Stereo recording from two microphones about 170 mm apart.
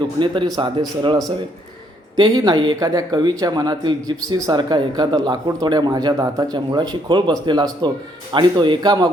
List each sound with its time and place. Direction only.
0.2 s speech: 25° right (ahead or behind)